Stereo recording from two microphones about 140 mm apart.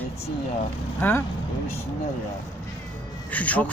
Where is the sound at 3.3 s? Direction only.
10° left (ahead or behind).